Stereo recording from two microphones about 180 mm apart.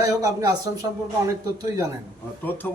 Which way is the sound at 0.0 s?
20° right (ahead or behind).